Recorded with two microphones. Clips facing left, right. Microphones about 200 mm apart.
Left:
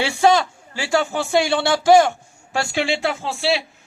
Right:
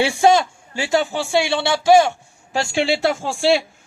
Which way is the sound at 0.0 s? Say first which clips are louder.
Right 2 dB; 25° right (ahead or behind).